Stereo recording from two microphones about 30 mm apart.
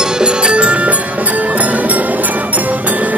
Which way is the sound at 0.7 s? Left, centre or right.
Right.